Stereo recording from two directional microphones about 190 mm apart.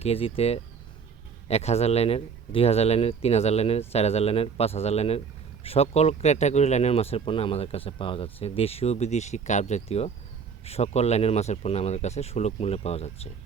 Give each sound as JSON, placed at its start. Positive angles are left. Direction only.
{"t": 0.0, "sound": "speech", "side_deg": 30}